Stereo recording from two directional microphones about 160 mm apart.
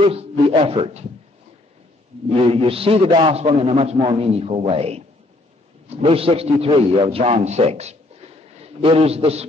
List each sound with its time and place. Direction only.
0.0 s a man's voice: 35° right (ahead or behind)
2.4 s a man's voice: 35° right (ahead or behind)